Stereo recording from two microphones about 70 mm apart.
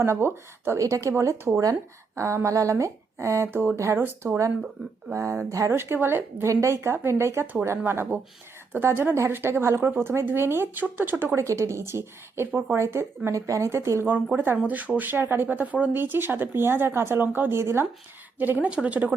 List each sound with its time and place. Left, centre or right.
0.0 s speech: right
0.8 s speech: right
5.7 s speech: right
6.4 s speech: right
11.4 s speech: right
14.3 s speech: right
18.3 s speech: right